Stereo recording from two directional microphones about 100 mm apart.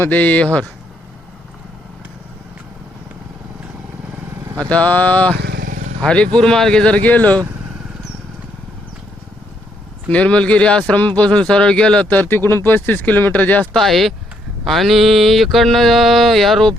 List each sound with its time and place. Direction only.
0.0 s speech: 15° left (ahead or behind)
4.4 s vehicle: 35° right (ahead or behind)
4.7 s speech: 15° left (ahead or behind)
10.1 s speech: 15° left (ahead or behind)
13.7 s mantra: centre (ahead or behind)